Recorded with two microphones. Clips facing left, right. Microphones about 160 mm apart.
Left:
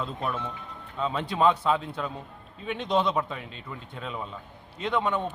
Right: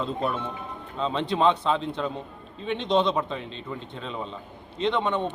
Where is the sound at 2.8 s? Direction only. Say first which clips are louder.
Right 2 dB; 5° left (ahead or behind).